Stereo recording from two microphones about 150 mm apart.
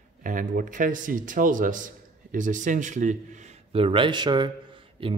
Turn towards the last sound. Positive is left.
turn(degrees=-35)  # may be behind; listen again after turning